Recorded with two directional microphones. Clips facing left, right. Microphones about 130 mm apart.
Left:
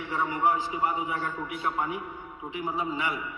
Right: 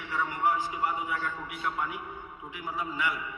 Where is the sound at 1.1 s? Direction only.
35° left (ahead or behind).